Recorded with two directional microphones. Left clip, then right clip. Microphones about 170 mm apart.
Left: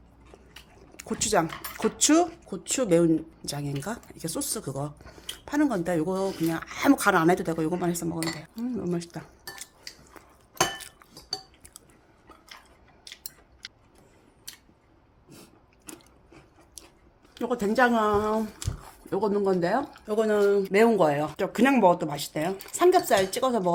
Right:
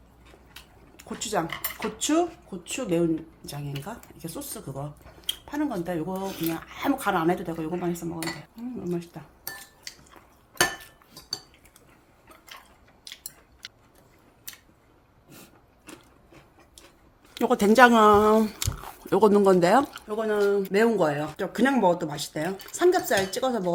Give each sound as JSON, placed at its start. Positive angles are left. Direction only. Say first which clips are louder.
{"t": 0.9, "sound": "speech", "louder": "left 4 dB", "side_deg": 40}
{"t": 2.5, "sound": "speech", "louder": "left 5 dB", "side_deg": 60}
{"t": 17.3, "sound": "speech", "louder": "right 6 dB", "side_deg": -35}
{"t": 18.9, "sound": "speech", "louder": "right 7 dB", "side_deg": -40}
{"t": 20.1, "sound": "speech", "louder": "left 2 dB", "side_deg": 35}